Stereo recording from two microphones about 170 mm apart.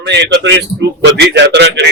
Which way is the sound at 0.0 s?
90° right.